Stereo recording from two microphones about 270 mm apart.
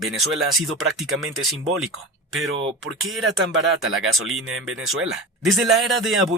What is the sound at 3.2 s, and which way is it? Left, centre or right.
Speech, right.